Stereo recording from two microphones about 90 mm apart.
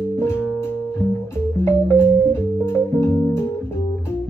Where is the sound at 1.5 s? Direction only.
25° left (ahead or behind).